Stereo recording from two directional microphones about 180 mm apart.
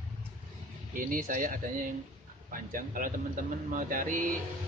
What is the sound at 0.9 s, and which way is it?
Speech, 50° right (ahead or behind).